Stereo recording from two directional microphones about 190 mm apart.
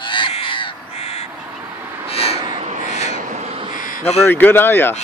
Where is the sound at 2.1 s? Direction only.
30° left (ahead or behind).